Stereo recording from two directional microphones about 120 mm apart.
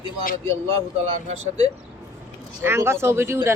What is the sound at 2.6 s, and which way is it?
Speech, 20° right (ahead or behind).